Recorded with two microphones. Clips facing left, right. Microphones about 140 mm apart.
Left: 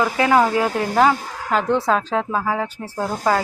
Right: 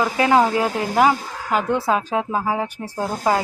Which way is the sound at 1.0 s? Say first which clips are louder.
Even; 10° right (ahead or behind).